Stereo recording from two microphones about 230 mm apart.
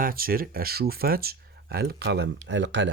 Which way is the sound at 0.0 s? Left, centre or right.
Right.